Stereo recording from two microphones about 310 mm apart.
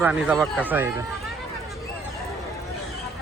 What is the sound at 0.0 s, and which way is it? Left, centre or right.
Speech, centre.